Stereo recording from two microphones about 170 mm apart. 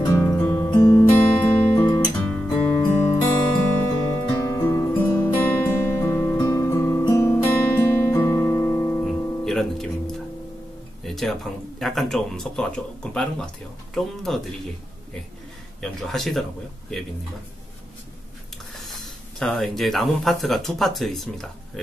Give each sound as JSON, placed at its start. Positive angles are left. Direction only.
{"t": 0.0, "sound": "music", "side_deg": 15}
{"t": 0.7, "sound": "guitar", "side_deg": 15}
{"t": 2.6, "sound": "music", "side_deg": 10}
{"t": 9.0, "sound": "music", "side_deg": 0}
{"t": 11.1, "sound": "speech", "side_deg": 0}
{"t": 15.8, "sound": "speech", "side_deg": 0}
{"t": 18.8, "sound": "speech", "side_deg": 0}